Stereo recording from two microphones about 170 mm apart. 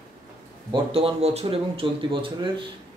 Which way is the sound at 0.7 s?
35° right (ahead or behind).